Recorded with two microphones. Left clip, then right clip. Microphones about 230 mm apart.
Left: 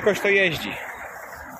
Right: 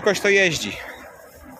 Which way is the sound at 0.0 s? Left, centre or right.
Centre.